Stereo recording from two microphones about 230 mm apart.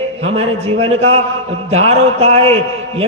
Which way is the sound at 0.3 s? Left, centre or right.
Right.